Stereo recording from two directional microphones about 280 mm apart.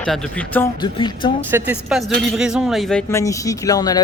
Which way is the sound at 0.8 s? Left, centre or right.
Centre.